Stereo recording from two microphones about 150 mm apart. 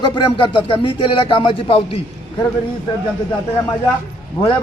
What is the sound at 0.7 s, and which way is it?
A man's voice, 35° left (ahead or behind).